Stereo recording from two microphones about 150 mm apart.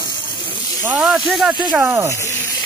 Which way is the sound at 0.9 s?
5° right (ahead or behind).